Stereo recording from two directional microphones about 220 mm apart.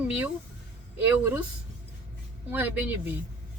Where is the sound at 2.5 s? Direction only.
10° right (ahead or behind).